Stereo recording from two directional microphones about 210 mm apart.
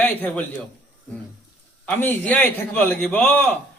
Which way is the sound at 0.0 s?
10° left (ahead or behind).